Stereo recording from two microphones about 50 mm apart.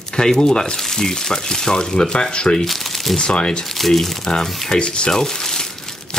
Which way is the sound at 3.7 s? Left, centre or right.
Centre.